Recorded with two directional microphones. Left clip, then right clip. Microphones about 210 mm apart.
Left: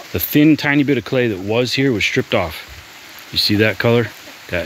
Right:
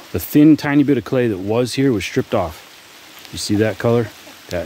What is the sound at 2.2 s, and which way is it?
Speech, 5° right (ahead or behind).